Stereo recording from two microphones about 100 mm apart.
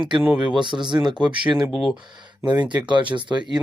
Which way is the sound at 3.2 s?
50° right (ahead or behind).